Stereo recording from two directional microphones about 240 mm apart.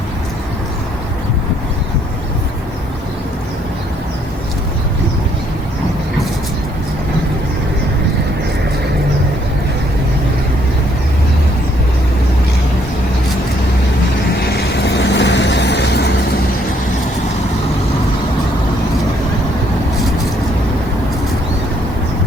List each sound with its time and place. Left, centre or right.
14.4 s vehicle: left